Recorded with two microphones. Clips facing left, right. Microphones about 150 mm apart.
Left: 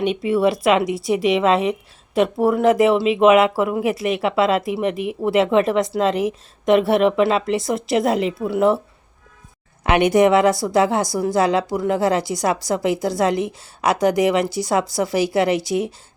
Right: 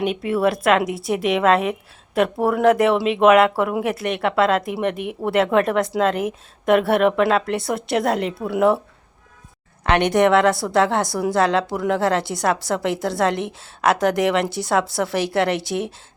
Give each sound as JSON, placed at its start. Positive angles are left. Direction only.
{"t": 0.0, "sound": "speech", "side_deg": 0}
{"t": 9.8, "sound": "speech", "side_deg": 5}